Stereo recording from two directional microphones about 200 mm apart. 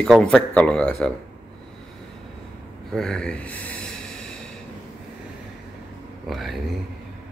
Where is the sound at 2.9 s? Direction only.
5° left (ahead or behind).